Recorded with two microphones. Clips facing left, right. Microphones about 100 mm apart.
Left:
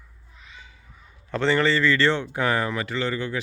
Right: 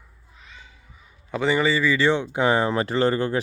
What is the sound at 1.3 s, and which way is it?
Speech, 10° right (ahead or behind).